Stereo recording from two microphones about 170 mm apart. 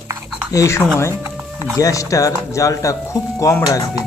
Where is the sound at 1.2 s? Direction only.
15° right (ahead or behind).